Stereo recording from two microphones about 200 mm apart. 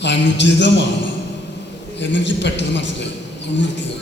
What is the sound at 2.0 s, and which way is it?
A man's voice, 60° left (ahead or behind).